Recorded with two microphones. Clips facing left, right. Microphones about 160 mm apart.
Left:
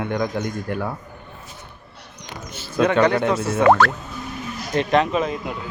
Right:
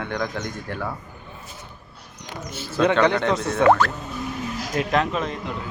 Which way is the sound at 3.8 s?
80° left.